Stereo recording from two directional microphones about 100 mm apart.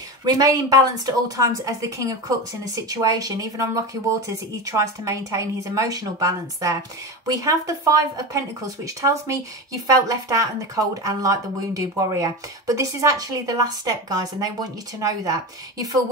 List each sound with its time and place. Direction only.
0.2 s speech: 40° right (ahead or behind)